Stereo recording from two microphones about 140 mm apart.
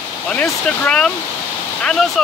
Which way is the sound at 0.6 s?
5° left (ahead or behind).